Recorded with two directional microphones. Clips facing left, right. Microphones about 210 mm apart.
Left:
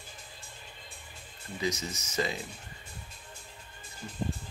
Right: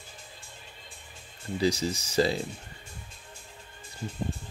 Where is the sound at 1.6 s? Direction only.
30° right (ahead or behind).